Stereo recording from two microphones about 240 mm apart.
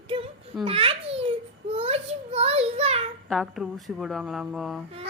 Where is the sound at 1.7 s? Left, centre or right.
Right.